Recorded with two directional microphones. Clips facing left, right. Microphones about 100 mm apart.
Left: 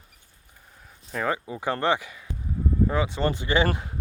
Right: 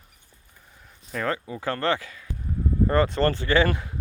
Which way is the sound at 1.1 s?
10° left (ahead or behind).